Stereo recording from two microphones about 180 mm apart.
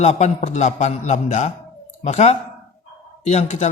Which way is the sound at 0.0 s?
40° left (ahead or behind).